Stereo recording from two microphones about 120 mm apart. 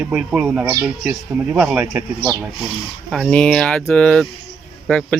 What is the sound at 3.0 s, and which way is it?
Speech, centre (ahead or behind).